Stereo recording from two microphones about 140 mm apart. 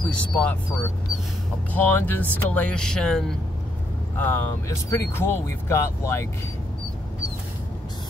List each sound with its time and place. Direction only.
0.1 s speech: 10° left (ahead or behind)
1.7 s speech: 15° left (ahead or behind)
4.2 s speech: 20° left (ahead or behind)